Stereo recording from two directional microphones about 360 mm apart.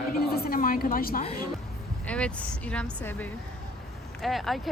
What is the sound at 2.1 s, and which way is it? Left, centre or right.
Speech, centre.